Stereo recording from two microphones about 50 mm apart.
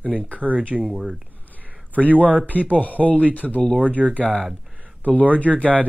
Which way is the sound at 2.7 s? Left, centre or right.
Left.